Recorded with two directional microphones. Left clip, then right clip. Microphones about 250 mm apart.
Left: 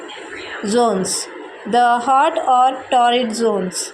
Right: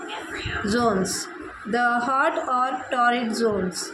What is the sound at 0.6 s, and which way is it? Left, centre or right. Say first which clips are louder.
A woman's voice: left 7 dB; centre.